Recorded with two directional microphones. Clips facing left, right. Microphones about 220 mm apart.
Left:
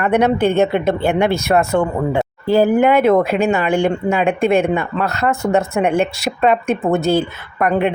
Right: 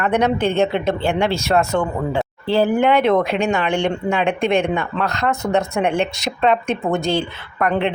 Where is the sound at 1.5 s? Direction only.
10° left (ahead or behind).